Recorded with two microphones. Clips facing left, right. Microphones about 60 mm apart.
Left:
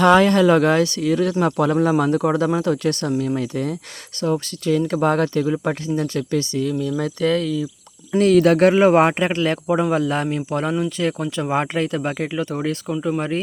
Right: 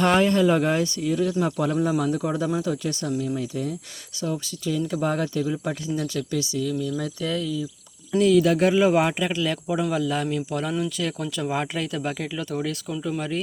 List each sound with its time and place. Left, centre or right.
0.0 s speech: left
5.9 s speech: left